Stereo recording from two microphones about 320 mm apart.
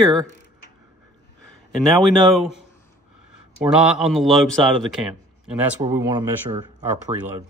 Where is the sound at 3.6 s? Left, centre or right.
Centre.